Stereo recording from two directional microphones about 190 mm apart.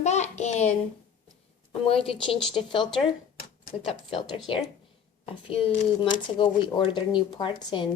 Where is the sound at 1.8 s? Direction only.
30° left (ahead or behind).